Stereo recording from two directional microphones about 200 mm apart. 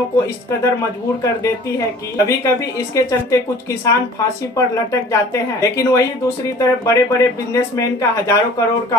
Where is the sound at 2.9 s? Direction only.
15° left (ahead or behind).